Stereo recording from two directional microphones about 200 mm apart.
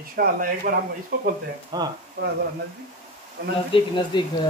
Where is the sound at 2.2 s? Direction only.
55° right (ahead or behind).